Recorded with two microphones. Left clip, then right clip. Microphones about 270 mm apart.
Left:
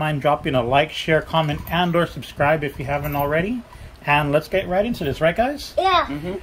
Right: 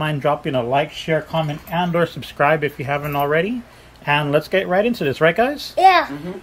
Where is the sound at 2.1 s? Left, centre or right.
Centre.